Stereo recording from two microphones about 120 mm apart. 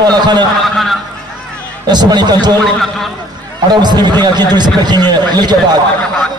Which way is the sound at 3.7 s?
35° right (ahead or behind).